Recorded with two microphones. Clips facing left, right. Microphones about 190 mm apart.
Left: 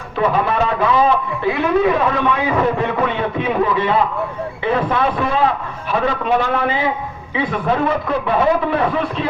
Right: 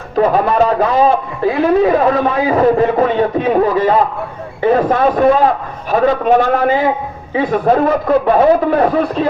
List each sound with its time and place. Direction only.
0.2 s a man's voice: 40° right (ahead or behind)